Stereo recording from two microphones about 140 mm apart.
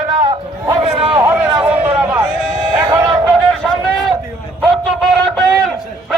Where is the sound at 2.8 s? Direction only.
25° right (ahead or behind).